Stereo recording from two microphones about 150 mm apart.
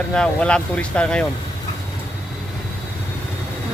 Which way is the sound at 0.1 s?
5° left (ahead or behind).